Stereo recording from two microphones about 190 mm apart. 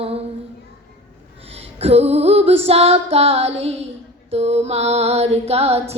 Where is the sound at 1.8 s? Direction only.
35° right (ahead or behind).